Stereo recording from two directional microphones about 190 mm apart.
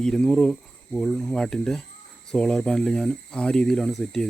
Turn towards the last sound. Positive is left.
turn(degrees=5)  # may be behind; listen again after turning